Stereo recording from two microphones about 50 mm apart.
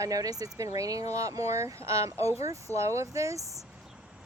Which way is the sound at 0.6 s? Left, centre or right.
Right.